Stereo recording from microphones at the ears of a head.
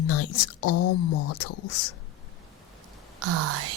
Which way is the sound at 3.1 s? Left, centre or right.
Right.